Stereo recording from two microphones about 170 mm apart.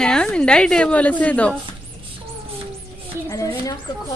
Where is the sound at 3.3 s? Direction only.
20° left (ahead or behind).